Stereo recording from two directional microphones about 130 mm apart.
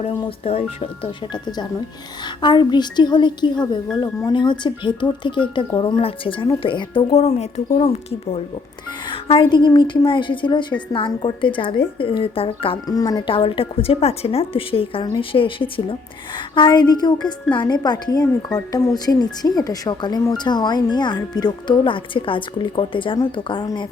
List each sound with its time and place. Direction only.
0.3 s a woman's voice: 50° left (ahead or behind)
1.3 s a woman's voice: 30° left (ahead or behind)
6.0 s a woman's voice: 45° left (ahead or behind)
7.1 s a woman's voice: 55° left (ahead or behind)
12.9 s a woman's voice: 30° left (ahead or behind)